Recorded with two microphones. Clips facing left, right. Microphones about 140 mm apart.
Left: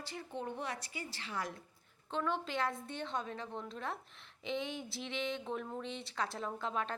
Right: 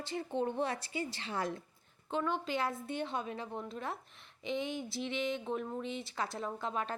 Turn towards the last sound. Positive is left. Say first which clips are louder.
# right 1 dB
turn(degrees=-5)  # may be behind; listen again after turning